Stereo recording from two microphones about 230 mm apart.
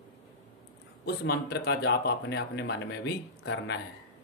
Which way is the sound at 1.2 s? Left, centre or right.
Left.